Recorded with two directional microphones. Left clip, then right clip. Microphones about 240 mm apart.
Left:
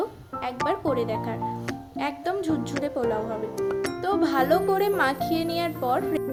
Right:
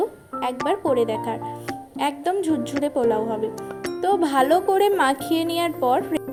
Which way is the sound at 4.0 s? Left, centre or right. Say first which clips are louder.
Right 5 dB; centre.